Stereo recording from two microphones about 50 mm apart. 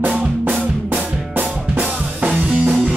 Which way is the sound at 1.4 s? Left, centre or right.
Right.